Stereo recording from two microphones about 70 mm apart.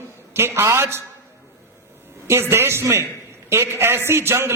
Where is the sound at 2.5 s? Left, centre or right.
Right.